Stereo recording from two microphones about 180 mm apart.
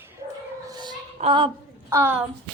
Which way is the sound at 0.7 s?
25° right (ahead or behind).